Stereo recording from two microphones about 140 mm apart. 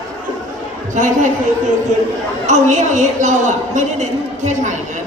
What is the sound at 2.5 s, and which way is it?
A man's voice, 60° right (ahead or behind).